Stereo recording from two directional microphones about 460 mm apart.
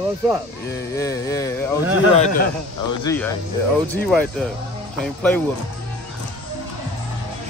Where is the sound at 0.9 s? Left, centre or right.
Centre.